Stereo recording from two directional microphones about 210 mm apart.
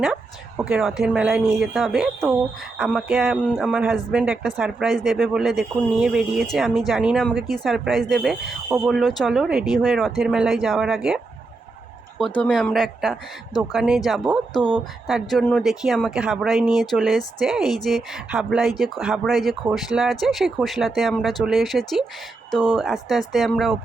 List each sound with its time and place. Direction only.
0.0 s speech: 5° right (ahead or behind)
12.4 s speech: 5° left (ahead or behind)